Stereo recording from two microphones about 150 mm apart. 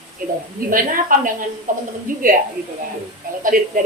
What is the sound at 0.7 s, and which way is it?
A woman's voice, 65° right (ahead or behind).